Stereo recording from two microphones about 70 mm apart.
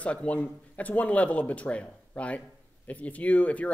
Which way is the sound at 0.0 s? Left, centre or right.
Centre.